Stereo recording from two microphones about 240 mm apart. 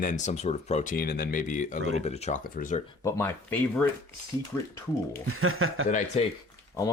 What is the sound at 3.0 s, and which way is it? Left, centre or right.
Speech, centre.